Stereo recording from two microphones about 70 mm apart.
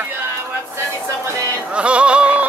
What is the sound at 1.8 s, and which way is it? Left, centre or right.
Music, centre.